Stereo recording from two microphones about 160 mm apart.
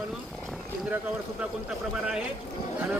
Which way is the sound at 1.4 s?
5° right (ahead or behind).